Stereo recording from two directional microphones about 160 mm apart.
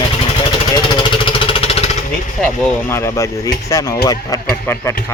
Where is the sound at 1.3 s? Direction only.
35° left (ahead or behind).